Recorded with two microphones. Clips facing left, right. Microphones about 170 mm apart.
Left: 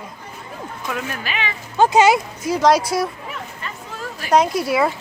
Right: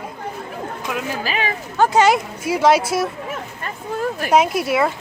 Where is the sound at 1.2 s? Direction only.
40° right (ahead or behind).